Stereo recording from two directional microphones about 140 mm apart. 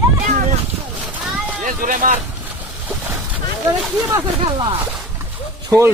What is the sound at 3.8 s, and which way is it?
Speech, 5° right (ahead or behind).